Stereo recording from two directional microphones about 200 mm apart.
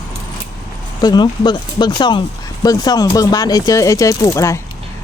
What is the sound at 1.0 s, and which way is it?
Speech, 20° left (ahead or behind).